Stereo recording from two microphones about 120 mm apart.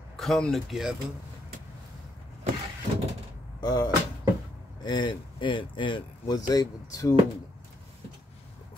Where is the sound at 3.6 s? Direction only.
40° left (ahead or behind).